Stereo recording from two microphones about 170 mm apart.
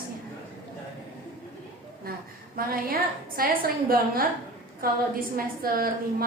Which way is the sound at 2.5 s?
60° right (ahead or behind).